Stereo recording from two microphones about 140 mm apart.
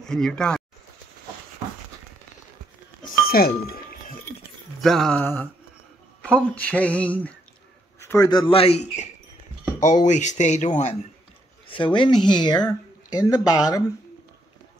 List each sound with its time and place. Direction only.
0.0 s speech: 5° left (ahead or behind)
3.3 s chink: 90° left
4.8 s speech: 5° left (ahead or behind)
5.2 s speech: 15° left (ahead or behind)
8.0 s a sound: 20° left (ahead or behind)
8.3 s a man's voice: 35° left (ahead or behind)
9.8 s speech: 60° left (ahead or behind)
11.6 s speech: 35° left (ahead or behind)